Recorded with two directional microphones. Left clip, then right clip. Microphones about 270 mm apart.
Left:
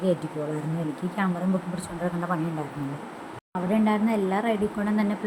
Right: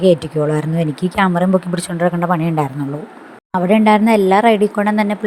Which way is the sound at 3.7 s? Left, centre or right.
Right.